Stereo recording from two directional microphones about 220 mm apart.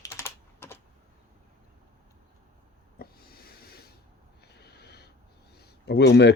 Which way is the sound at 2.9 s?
45° left (ahead or behind).